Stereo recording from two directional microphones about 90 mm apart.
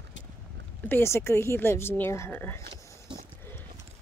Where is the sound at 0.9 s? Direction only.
25° left (ahead or behind).